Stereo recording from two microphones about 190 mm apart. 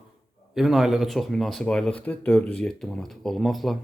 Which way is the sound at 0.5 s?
Centre (ahead or behind).